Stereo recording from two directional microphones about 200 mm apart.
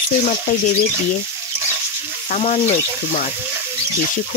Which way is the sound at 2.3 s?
35° left (ahead or behind).